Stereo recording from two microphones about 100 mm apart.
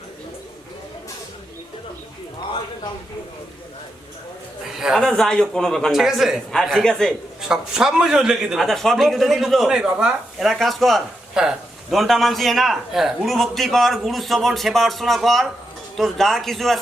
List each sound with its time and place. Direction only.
4.7 s speech: 5° right (ahead or behind)
5.0 s a man's voice: 5° left (ahead or behind)
7.4 s a man's voice: 5° right (ahead or behind)